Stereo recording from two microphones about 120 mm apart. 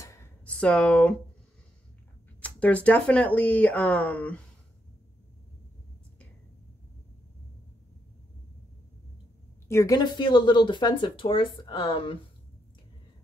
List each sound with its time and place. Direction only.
0.0 s a sound: 25° left (ahead or behind)
0.6 s speech: 10° left (ahead or behind)
2.4 s speech: 10° left (ahead or behind)
9.7 s a woman's voice: 20° left (ahead or behind)
9.9 s speech: 40° left (ahead or behind)